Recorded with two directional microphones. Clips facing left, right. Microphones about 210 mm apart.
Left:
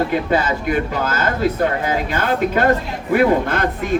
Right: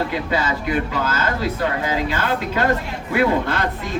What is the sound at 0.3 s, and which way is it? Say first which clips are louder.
Speech: left 3 dB; 50° left (ahead or behind).